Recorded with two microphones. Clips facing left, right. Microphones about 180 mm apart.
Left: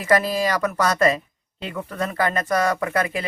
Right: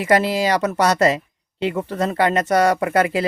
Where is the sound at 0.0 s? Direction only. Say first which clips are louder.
Right 2 dB; 25° right (ahead or behind).